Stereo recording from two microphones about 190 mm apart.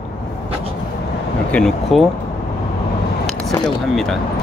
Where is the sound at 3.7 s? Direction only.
Centre (ahead or behind).